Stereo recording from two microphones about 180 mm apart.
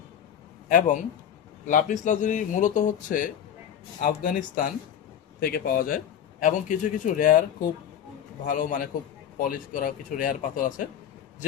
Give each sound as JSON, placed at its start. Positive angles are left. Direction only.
{"t": 0.7, "sound": "speech", "side_deg": 45}
{"t": 8.4, "sound": "speech", "side_deg": 50}